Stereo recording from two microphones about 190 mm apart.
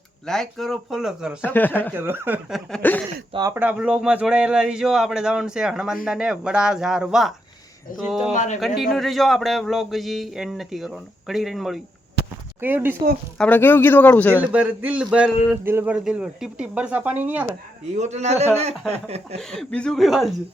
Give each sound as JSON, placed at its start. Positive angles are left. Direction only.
{"t": 0.3, "sound": "speech", "side_deg": 0}
{"t": 1.4, "sound": "speech", "side_deg": 10}
{"t": 1.9, "sound": "speech", "side_deg": -10}
{"t": 2.6, "sound": "speech", "side_deg": 5}
{"t": 3.3, "sound": "speech", "side_deg": -20}
{"t": 3.6, "sound": "speech", "side_deg": -5}
{"t": 8.3, "sound": "speech", "side_deg": 40}
{"t": 8.6, "sound": "speech", "side_deg": 0}
{"t": 13.4, "sound": "speech", "side_deg": 10}
{"t": 14.4, "sound": "speech", "side_deg": -10}
{"t": 17.9, "sound": "a man's voice", "side_deg": -35}
{"t": 19.4, "sound": "speech", "side_deg": 0}